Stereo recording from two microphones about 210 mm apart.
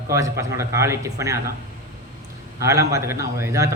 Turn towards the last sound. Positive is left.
turn(degrees=-15)  # may be behind; listen again after turning